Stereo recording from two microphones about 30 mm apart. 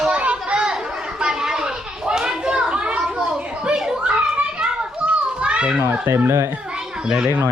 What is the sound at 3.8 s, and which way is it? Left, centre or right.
Children playing, right.